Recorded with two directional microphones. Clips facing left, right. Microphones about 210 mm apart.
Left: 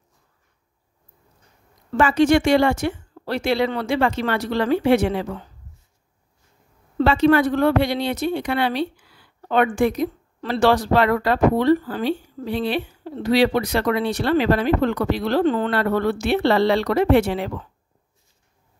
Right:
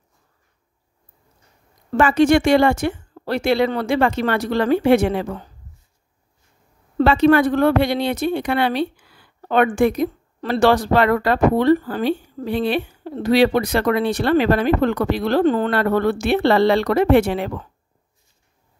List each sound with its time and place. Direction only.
1.9 s speech: 55° right (ahead or behind)
7.0 s speech: 55° right (ahead or behind)